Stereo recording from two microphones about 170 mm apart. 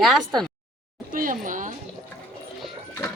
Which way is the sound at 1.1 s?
50° right (ahead or behind).